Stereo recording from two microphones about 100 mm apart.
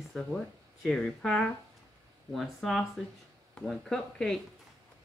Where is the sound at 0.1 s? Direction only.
5° left (ahead or behind).